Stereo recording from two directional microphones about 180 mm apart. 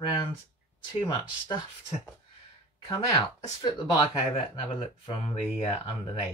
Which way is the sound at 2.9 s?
25° left (ahead or behind).